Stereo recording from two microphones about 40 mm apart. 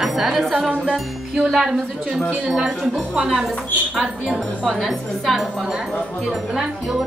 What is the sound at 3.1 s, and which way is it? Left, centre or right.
Speech, centre.